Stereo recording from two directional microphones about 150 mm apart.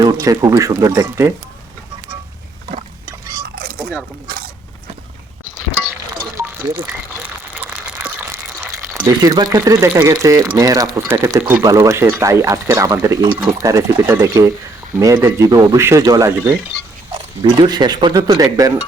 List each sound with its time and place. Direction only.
0.0 s speech: 25° right (ahead or behind)
4.3 s mechanisms: 80° right
6.3 s a sound: 15° right (ahead or behind)
8.0 s speech: 15° right (ahead or behind)
17.4 s speech: 25° right (ahead or behind)